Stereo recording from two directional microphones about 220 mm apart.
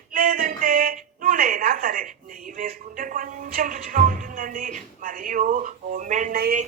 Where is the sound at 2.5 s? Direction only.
40° right (ahead or behind).